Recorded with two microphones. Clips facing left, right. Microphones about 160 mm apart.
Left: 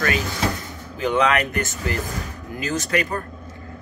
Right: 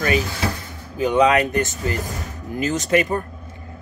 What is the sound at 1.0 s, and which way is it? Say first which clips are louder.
A man's voice: right 3 dB; 15° right (ahead or behind).